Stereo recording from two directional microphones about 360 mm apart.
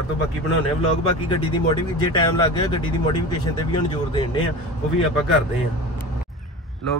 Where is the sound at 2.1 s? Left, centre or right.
Centre.